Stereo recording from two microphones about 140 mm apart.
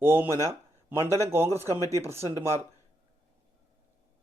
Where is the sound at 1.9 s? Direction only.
20° right (ahead or behind).